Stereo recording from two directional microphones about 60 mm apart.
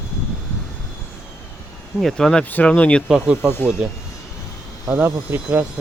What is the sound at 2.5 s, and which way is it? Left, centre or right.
Speech, left.